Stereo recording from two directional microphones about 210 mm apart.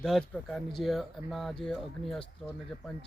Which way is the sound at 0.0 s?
Centre (ahead or behind).